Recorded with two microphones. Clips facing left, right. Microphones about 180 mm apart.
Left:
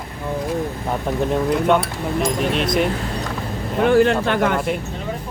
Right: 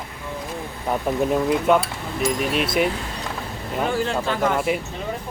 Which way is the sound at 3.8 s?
65° left (ahead or behind).